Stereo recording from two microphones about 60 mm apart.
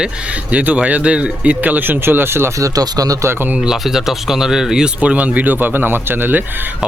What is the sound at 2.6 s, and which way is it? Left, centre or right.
Speech, right.